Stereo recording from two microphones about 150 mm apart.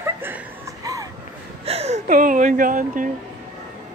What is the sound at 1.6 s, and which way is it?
Speech, 45° right (ahead or behind).